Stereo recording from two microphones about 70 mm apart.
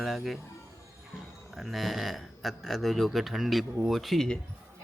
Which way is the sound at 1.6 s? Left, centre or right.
Centre.